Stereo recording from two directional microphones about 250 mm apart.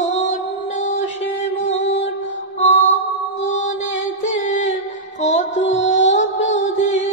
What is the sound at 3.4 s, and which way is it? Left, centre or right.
Mantra, left.